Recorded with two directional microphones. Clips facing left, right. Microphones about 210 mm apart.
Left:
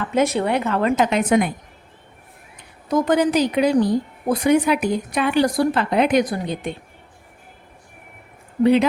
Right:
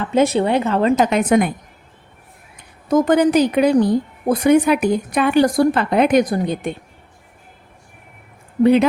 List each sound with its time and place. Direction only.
0.0 s speech: 30° right (ahead or behind)
1.1 s speech: 50° right (ahead or behind)
2.9 s speech: 55° right (ahead or behind)
8.6 s speech: 50° right (ahead or behind)